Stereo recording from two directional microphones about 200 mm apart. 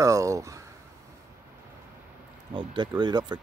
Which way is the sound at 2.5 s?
25° right (ahead or behind).